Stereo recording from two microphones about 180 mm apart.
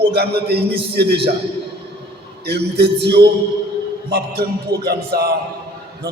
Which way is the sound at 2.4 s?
65° right (ahead or behind).